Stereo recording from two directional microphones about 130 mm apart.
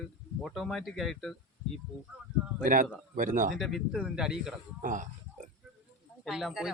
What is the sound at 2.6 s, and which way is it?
Speech, 90° right.